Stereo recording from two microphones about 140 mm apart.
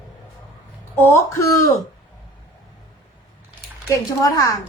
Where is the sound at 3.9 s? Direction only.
25° left (ahead or behind).